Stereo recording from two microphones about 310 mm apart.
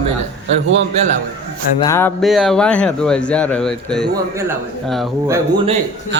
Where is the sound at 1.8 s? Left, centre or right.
Centre.